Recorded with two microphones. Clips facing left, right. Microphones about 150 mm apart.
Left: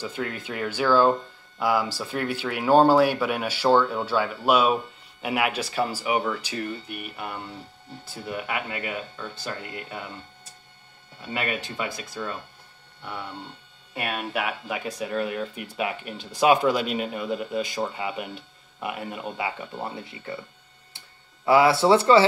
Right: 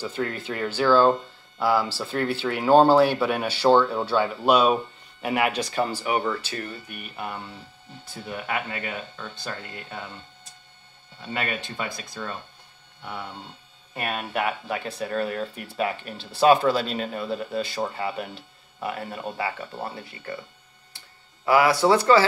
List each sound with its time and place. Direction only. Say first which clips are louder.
0.0 s speech: right 2 dB; 10° left (ahead or behind)
11.2 s speech: left 1 dB; 5° left (ahead or behind)
13.9 s speech: right 1 dB; 5° left (ahead or behind); by 20.3 s 20° left (ahead or behind)
21.5 s speech: left 1 dB; 25° left (ahead or behind)